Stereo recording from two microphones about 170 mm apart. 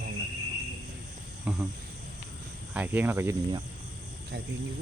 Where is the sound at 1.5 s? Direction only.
5° right (ahead or behind).